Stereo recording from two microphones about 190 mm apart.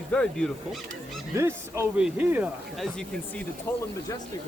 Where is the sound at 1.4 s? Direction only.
15° right (ahead or behind); by 3.4 s centre (ahead or behind).